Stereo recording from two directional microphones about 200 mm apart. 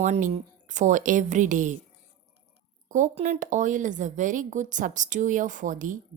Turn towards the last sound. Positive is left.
turn(degrees=-40)  # may be behind; listen again after turning